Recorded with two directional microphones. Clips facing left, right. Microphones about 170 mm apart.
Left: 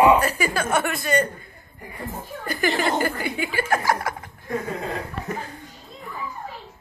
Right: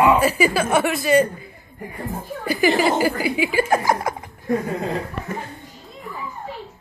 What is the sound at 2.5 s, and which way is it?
A woman's voice, 5° right (ahead or behind).